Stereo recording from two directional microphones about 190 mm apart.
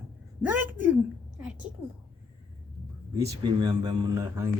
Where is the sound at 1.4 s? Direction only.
5° right (ahead or behind).